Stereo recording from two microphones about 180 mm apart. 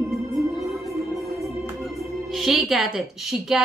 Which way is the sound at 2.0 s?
Centre (ahead or behind).